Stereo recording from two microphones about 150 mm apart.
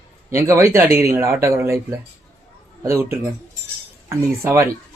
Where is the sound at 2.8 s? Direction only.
15° right (ahead or behind).